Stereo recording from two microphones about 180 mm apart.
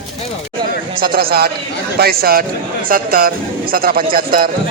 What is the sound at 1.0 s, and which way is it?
A man's voice, 55° right (ahead or behind).